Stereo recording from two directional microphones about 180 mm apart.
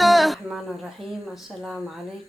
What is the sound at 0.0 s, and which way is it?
Speech, centre (ahead or behind).